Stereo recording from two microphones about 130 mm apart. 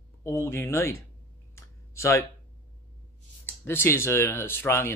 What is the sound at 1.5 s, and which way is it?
Clicking, 20° left (ahead or behind).